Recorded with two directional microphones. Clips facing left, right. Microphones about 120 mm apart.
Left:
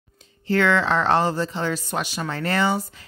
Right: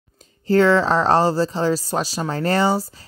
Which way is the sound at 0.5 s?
35° right (ahead or behind).